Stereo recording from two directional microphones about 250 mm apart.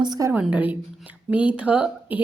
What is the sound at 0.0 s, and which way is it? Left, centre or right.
A woman's voice, centre.